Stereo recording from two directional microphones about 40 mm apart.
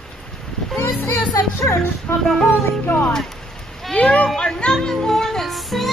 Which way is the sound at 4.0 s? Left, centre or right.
Left.